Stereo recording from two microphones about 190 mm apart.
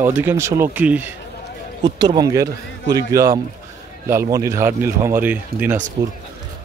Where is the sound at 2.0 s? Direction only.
20° right (ahead or behind).